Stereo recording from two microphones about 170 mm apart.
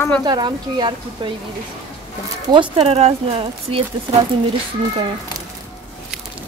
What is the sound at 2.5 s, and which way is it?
Speech, 30° right (ahead or behind).